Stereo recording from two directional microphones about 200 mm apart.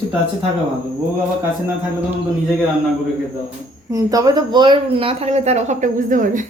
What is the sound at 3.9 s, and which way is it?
Speech, 20° right (ahead or behind).